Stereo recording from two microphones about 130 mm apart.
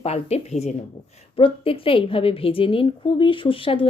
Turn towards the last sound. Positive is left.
turn(degrees=45)  # may be behind; listen again after turning